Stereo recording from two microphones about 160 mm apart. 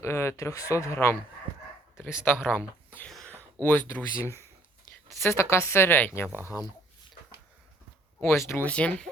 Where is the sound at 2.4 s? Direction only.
10° left (ahead or behind).